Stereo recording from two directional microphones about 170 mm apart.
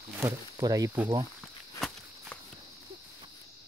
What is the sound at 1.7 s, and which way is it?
Walk, 5° left (ahead or behind).